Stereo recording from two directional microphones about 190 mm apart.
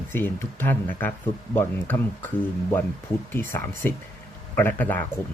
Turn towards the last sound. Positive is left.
turn(degrees=10)  # may be behind; listen again after turning